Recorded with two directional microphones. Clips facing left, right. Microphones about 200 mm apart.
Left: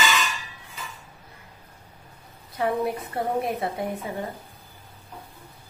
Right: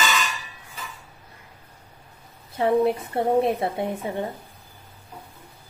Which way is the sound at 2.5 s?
25° right (ahead or behind).